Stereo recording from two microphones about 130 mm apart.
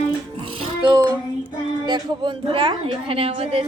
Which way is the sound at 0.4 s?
45° right (ahead or behind).